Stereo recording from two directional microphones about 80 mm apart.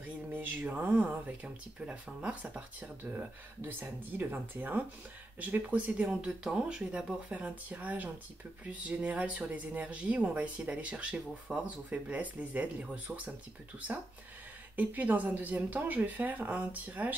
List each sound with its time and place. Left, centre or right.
0.0 s speech: right
14.8 s speech: right